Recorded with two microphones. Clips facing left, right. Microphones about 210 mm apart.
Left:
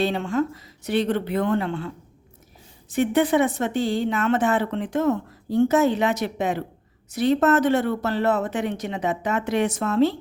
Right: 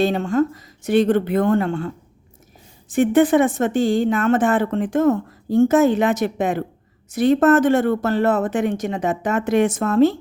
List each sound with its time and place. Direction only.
0.0 s speech: 45° right (ahead or behind)
2.9 s speech: 50° right (ahead or behind)